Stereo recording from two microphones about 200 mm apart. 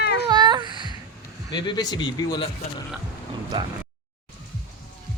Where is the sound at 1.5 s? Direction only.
20° left (ahead or behind).